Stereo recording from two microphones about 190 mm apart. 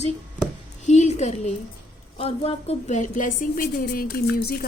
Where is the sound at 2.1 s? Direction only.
30° left (ahead or behind).